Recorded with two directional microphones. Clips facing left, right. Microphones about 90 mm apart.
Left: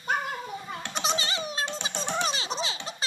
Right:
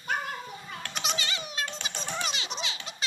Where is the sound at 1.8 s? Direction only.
30° left (ahead or behind).